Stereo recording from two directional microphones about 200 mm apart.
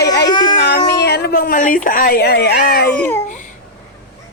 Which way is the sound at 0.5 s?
50° left (ahead or behind).